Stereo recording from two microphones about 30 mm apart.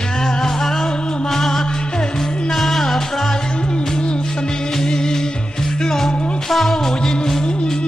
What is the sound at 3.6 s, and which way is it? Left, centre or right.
Music, left.